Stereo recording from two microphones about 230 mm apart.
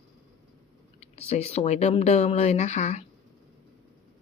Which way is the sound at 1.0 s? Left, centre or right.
Left.